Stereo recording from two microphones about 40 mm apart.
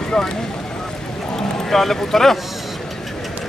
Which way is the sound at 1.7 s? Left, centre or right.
Centre.